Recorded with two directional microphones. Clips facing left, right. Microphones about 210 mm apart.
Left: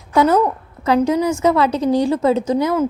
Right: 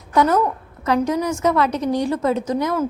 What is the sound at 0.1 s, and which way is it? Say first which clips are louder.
A woman's voice: left 3 dB; 30° left (ahead or behind).